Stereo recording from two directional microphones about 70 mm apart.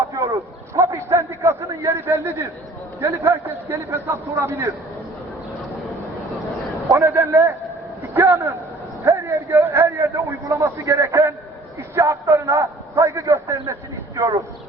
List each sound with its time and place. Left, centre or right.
0.1 s a sound: right
3.0 s a man's voice: right
6.8 s a man's voice: right